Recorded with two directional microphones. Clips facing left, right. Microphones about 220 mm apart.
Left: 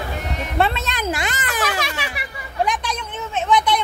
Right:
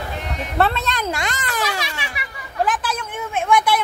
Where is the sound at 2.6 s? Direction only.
5° right (ahead or behind).